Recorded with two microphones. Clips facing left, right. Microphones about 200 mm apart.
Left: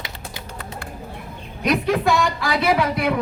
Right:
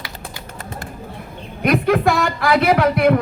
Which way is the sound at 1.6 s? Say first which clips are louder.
Right 3 dB; 55° right (ahead or behind).